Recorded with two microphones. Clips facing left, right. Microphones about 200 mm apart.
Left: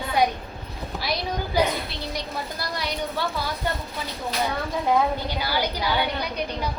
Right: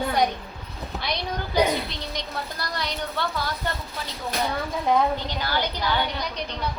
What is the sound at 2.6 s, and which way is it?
Speech, 10° left (ahead or behind).